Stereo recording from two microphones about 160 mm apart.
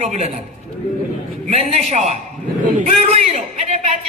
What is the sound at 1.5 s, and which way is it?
A man's voice, 40° right (ahead or behind).